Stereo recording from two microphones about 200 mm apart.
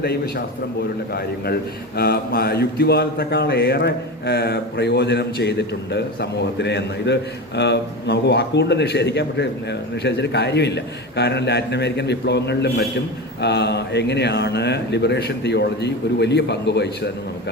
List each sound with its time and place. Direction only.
0.0 s a man's voice: 50° left (ahead or behind)
2.0 s speech: 50° left (ahead or behind)